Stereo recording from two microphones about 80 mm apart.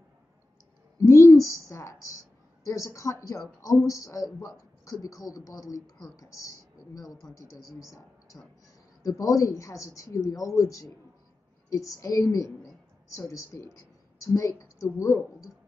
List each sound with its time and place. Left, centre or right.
1.0 s a woman's voice: left
8.3 s a woman's voice: left